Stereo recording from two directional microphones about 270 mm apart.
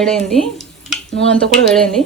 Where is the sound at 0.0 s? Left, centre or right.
Centre.